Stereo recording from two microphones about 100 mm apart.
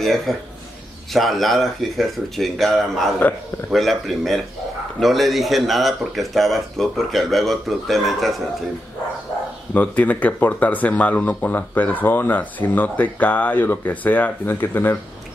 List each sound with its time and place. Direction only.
0.3 s speech: centre (ahead or behind)
9.8 s speech: 15° left (ahead or behind)